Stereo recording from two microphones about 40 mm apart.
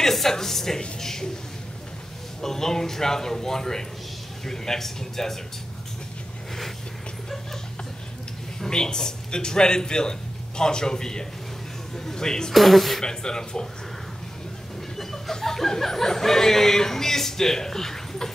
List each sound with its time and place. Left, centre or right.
0.0 s speech: centre
2.4 s speech: centre
8.5 s a man's voice: centre
12.5 s speech: centre
13.0 s a man's voice: centre
15.0 s speech: centre